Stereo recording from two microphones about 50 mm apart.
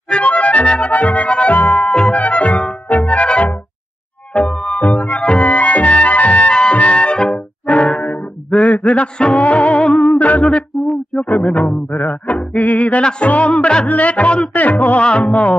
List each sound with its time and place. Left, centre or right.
0.1 s music: left
10.2 s yodeling: left
11.1 s music: centre
11.4 s music: left
13.8 s speech: left
14.5 s a sound: left